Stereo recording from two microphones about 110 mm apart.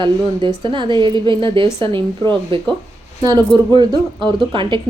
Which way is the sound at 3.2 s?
35° right (ahead or behind).